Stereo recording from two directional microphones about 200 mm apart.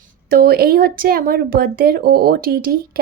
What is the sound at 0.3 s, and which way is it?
Speech, 50° right (ahead or behind).